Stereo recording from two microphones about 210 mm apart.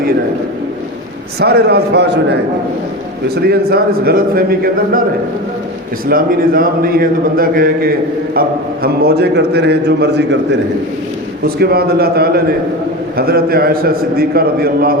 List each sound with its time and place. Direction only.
1.4 s a man's voice: 50° right (ahead or behind)
6.1 s a man's voice: 45° right (ahead or behind)